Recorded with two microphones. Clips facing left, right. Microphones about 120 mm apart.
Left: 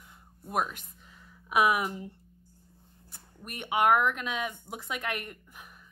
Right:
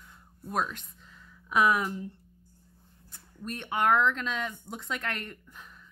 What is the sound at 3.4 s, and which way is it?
A woman's voice, 10° left (ahead or behind).